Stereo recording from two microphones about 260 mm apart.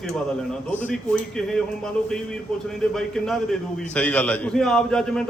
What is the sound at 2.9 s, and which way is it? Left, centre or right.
A man's voice, centre.